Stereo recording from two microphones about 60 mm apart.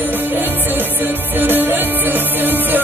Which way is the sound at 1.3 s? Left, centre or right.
Right.